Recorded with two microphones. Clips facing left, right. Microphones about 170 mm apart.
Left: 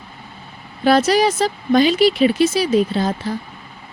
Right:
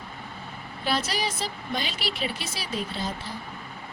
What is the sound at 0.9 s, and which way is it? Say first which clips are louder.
Speech: left 14 dB; 90° left.